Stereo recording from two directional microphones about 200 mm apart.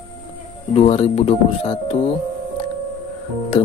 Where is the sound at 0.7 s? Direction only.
35° left (ahead or behind).